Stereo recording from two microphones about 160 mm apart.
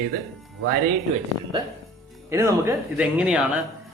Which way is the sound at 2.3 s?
20° right (ahead or behind).